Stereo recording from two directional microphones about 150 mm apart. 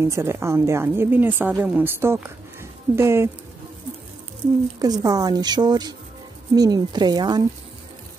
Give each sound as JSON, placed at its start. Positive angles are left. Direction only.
{"t": 0.0, "sound": "a woman's voice", "side_deg": -15}
{"t": 4.7, "sound": "speech", "side_deg": -25}